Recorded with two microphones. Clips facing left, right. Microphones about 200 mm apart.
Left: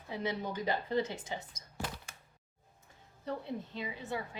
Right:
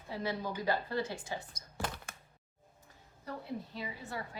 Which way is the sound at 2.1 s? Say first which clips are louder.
Right 4 dB; 55° right (ahead or behind).